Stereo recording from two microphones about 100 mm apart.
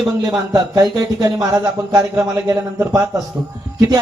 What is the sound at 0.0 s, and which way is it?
A man's voice, 40° right (ahead or behind).